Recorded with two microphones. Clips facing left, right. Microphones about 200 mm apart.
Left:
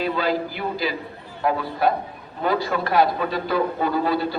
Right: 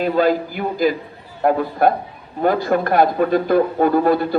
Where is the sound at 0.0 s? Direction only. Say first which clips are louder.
Right 6 dB; 50° right (ahead or behind).